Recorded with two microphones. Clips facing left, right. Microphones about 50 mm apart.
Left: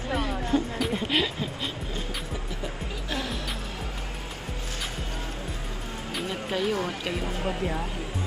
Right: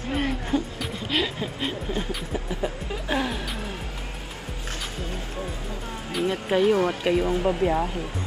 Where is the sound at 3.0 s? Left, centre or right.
Right.